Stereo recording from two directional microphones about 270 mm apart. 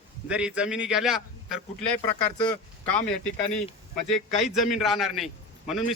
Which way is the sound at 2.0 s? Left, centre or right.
Centre.